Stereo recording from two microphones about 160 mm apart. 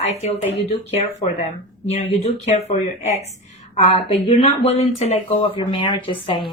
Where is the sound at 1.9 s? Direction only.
40° left (ahead or behind).